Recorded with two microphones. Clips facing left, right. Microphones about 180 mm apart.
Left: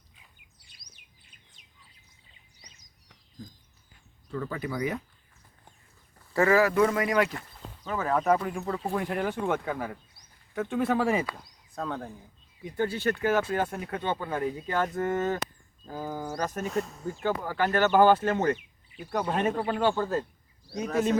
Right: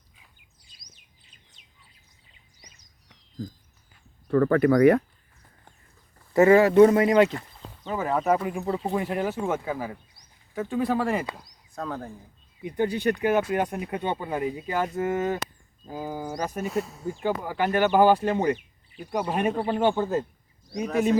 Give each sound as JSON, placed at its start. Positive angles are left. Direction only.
{"t": 4.3, "sound": "speech", "side_deg": -60}
{"t": 6.3, "sound": "speech", "side_deg": -25}
{"t": 7.9, "sound": "speech", "side_deg": -5}
{"t": 8.6, "sound": "speech", "side_deg": -20}
{"t": 9.0, "sound": "speech", "side_deg": -5}
{"t": 12.6, "sound": "speech", "side_deg": -15}
{"t": 17.1, "sound": "speech", "side_deg": -15}
{"t": 20.7, "sound": "speech", "side_deg": 5}